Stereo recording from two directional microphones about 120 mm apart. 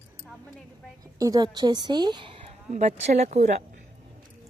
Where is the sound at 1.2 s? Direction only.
30° right (ahead or behind).